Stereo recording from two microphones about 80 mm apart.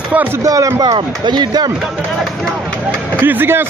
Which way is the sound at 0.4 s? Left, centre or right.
Right.